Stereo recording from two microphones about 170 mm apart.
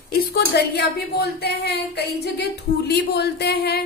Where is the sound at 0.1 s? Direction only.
65° left (ahead or behind).